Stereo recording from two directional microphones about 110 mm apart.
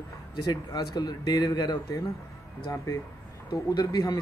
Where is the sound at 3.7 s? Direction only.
35° left (ahead or behind).